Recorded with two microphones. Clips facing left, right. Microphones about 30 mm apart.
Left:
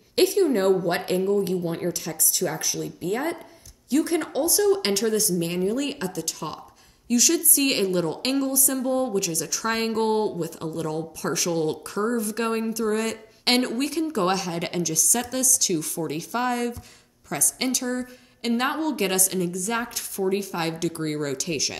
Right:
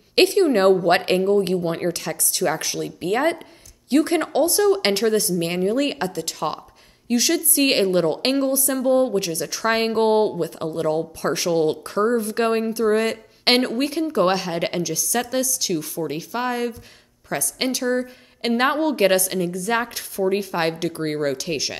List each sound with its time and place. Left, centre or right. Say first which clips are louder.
0.1 s speech: right 4 dB; right
1.7 s a woman's voice: right 4 dB; right
15.7 s a woman's voice: right 2 dB; centre